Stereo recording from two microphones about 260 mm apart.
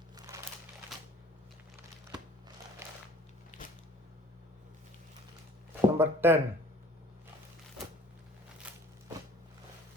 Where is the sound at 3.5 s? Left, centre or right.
Left.